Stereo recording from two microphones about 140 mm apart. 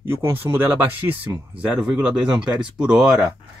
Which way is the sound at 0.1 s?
15° right (ahead or behind).